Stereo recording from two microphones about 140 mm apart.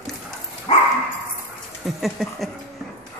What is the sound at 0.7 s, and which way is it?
Dog, 45° left (ahead or behind).